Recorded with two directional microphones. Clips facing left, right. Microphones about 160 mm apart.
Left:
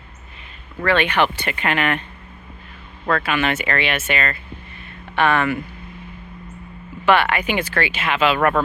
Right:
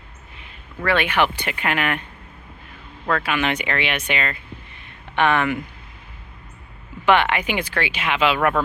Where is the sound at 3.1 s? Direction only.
10° right (ahead or behind).